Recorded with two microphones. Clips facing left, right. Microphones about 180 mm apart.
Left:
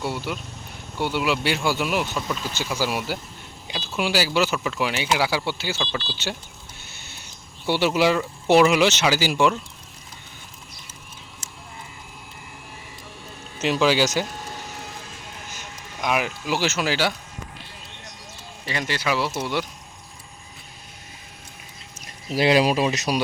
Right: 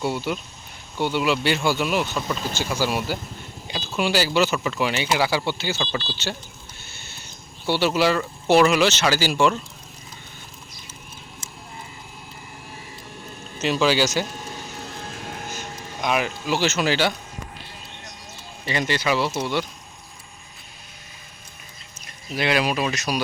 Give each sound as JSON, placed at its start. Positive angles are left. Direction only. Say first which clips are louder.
{"t": 0.0, "sound": "speech", "louder": "right 3 dB", "side_deg": 0}
{"t": 2.1, "sound": "speech", "louder": "right 1 dB", "side_deg": 0}
{"t": 2.6, "sound": "speech", "louder": "right 1 dB", "side_deg": 10}
{"t": 7.7, "sound": "speech", "louder": "even", "side_deg": 15}
{"t": 13.6, "sound": "speech", "louder": "even", "side_deg": 15}
{"t": 15.0, "sound": "music", "louder": "right 6 dB", "side_deg": -60}
{"t": 16.0, "sound": "speech", "louder": "right 1 dB", "side_deg": 10}
{"t": 18.6, "sound": "speech", "louder": "right 3 dB", "side_deg": 5}
{"t": 22.4, "sound": "speech", "louder": "left 4 dB", "side_deg": 30}